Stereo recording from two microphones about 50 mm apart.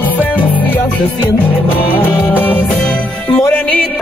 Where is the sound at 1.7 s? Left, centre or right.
Left.